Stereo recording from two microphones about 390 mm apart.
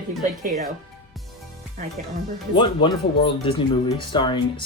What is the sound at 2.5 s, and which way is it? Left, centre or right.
Speech, centre.